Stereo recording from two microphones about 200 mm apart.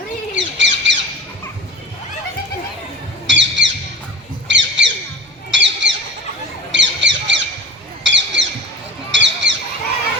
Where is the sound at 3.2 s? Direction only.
65° right (ahead or behind).